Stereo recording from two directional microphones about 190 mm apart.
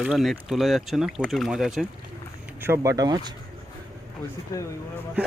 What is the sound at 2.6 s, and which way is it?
Speech, 15° right (ahead or behind).